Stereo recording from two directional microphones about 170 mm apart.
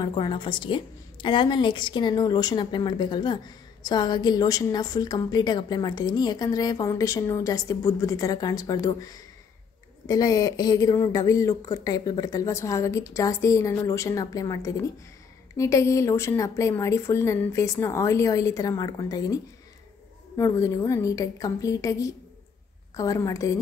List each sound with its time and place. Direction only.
0.0 s a woman's voice: 25° left (ahead or behind)